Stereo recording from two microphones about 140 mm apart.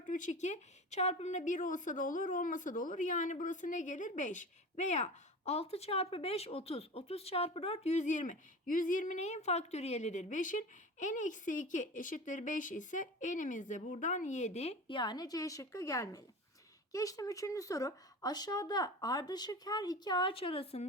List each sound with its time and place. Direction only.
0.1 s speech: 65° left (ahead or behind); by 20.8 s 45° left (ahead or behind)